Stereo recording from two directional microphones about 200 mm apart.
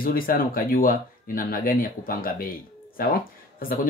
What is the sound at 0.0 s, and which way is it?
Speech, 45° left (ahead or behind).